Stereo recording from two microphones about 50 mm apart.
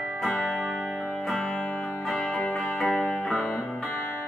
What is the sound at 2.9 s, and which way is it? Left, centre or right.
Music, left.